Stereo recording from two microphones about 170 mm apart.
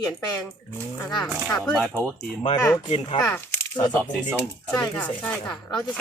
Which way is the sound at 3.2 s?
10° left (ahead or behind).